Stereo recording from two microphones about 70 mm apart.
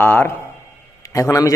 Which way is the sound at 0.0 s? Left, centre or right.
Left.